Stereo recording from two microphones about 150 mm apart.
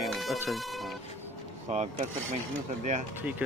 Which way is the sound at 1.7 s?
45° right (ahead or behind).